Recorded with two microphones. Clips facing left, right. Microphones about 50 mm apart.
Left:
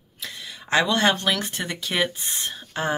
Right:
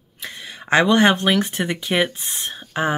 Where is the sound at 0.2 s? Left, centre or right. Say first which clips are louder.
Right 3 dB; right.